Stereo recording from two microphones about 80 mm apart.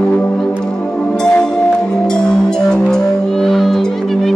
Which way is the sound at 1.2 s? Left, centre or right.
Centre.